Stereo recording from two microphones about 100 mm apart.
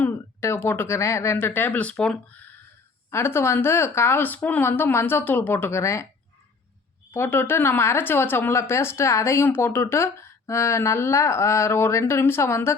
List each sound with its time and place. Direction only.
0.0 s speech: 25° left (ahead or behind)
3.1 s speech: 25° left (ahead or behind)
7.1 s speech: 20° left (ahead or behind)